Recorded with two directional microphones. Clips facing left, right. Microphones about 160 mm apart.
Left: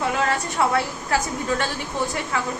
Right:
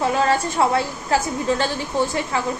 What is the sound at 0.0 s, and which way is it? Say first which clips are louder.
Speech: right 4 dB; 35° right (ahead or behind).